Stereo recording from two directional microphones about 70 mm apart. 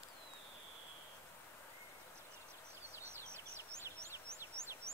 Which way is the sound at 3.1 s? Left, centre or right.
Right.